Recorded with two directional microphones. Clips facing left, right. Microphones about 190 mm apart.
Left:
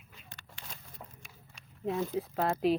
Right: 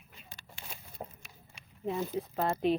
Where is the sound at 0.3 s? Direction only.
10° right (ahead or behind).